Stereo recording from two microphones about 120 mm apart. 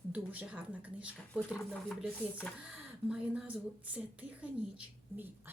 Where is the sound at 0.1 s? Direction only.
10° right (ahead or behind).